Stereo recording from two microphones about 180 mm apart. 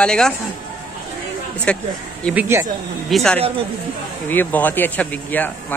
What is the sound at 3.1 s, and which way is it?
Speech, 5° left (ahead or behind).